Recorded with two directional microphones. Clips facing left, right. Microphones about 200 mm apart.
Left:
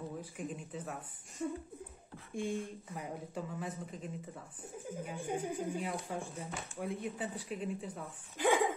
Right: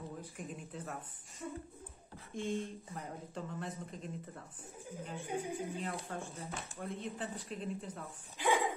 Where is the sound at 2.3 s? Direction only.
10° left (ahead or behind).